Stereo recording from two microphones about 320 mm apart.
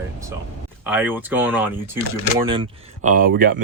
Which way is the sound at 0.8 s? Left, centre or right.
Centre.